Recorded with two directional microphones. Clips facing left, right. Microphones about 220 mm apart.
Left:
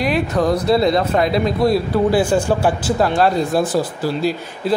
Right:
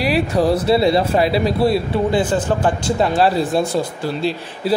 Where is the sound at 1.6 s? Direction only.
Centre (ahead or behind).